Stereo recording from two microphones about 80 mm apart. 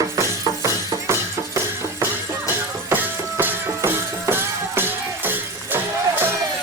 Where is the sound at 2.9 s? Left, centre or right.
Right.